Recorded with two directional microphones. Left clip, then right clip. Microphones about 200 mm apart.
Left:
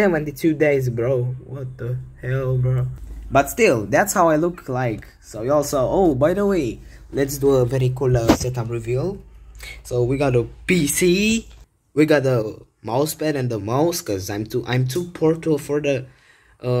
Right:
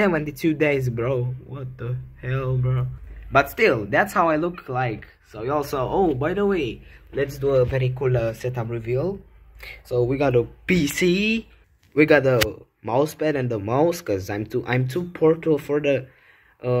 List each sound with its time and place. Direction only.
0.0 s speech: 30° right (ahead or behind)
3.3 s speech: 15° left (ahead or behind)
8.5 s speech: 5° right (ahead or behind)